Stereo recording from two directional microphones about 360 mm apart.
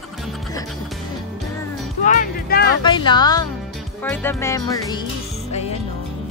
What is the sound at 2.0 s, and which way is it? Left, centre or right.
Speech, left.